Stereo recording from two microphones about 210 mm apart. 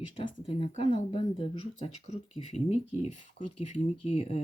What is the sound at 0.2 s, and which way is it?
Speech, 25° left (ahead or behind).